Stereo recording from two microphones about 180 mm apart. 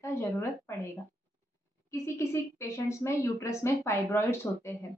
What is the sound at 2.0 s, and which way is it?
A woman's voice, 15° left (ahead or behind).